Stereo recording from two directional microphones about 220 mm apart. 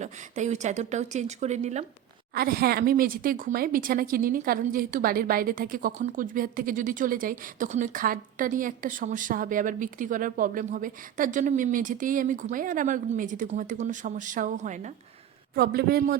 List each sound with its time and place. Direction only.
0.0 s speech: 30° right (ahead or behind)
2.3 s speech: 45° right (ahead or behind)
15.5 s a man's voice: 45° right (ahead or behind)